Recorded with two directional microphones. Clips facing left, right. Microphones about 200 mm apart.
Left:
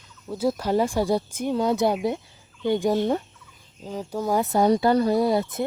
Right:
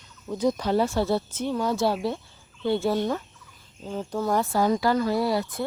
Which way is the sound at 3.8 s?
10° left (ahead or behind).